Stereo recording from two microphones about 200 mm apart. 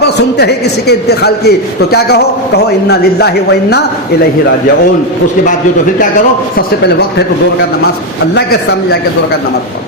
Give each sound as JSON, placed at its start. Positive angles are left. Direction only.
{"t": 0.0, "sound": "a man's voice", "side_deg": 55}
{"t": 6.6, "sound": "a man's voice", "side_deg": 55}
{"t": 8.4, "sound": "a man's voice", "side_deg": 50}